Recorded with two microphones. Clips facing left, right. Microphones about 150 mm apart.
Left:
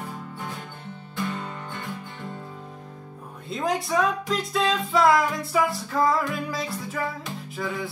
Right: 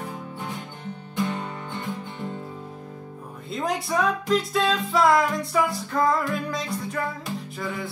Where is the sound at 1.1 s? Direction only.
15° right (ahead or behind).